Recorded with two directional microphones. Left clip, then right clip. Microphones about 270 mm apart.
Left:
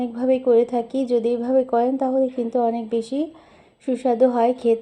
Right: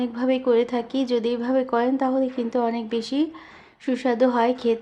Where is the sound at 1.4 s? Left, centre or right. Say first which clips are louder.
Left 3 dB; right.